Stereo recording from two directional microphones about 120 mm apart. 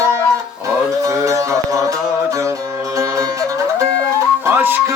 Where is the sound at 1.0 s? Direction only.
25° right (ahead or behind).